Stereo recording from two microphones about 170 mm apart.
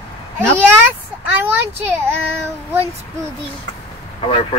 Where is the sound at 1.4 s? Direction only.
15° right (ahead or behind).